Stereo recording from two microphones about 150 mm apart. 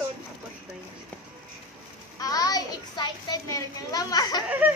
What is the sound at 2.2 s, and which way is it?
A child's voice, 25° left (ahead or behind).